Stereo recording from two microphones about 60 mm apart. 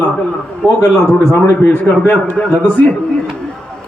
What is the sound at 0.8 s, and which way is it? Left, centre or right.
A man's voice, left.